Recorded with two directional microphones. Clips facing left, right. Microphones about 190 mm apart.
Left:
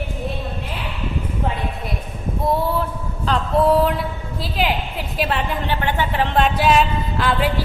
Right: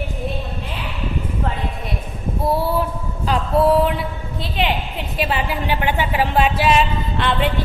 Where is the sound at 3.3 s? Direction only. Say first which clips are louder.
Even; 10° right (ahead or behind).